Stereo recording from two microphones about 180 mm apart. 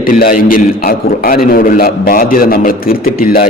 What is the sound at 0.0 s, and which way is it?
A man's voice, 50° left (ahead or behind).